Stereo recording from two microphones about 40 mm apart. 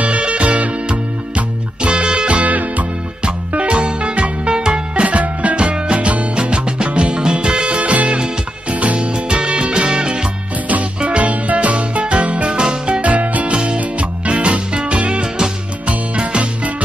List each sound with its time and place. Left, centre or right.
0.0 s music: right
3.3 s music: right
5.0 s music: right
10.7 s music: right
13.0 s music: right